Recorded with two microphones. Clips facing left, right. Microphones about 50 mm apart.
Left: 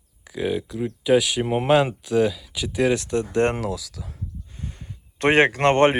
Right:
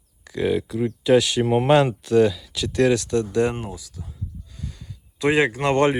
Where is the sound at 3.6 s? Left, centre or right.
Left.